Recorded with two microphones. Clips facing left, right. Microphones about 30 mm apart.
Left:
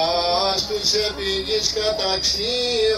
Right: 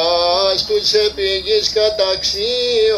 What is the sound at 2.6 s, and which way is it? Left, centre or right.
Music, right.